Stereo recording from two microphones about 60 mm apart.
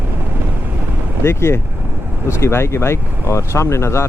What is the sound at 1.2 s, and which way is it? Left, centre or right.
Speech, left.